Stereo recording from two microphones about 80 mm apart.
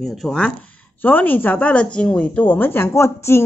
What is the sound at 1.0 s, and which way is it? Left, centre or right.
Speech, left.